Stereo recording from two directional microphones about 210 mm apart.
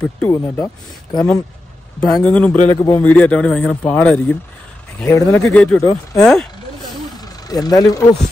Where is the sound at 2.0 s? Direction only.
5° left (ahead or behind).